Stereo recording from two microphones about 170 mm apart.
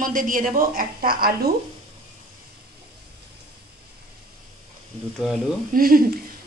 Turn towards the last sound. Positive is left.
turn(degrees=-60)  # may be behind; listen again after turning